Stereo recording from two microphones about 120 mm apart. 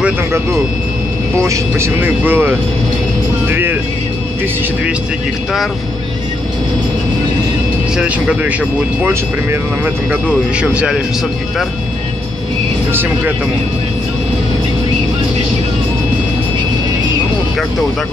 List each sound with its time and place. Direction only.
1.4 s speech: 25° right (ahead or behind)
3.4 s vehicle: 15° right (ahead or behind)
8.0 s speech: 10° right (ahead or behind)
9.0 s speech: 20° right (ahead or behind)
10.2 s speech: 10° right (ahead or behind)